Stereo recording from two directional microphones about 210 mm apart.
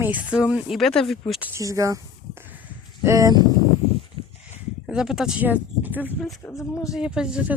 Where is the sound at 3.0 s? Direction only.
15° right (ahead or behind).